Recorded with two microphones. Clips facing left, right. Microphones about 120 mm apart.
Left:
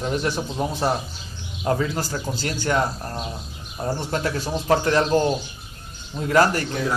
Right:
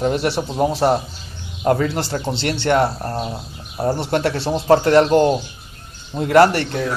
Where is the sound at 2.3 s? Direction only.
75° right (ahead or behind).